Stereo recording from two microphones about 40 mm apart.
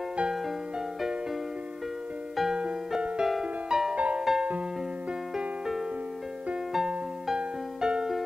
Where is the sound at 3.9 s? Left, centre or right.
Right.